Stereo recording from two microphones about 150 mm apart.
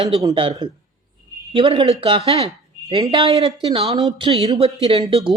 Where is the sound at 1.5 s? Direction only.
35° right (ahead or behind).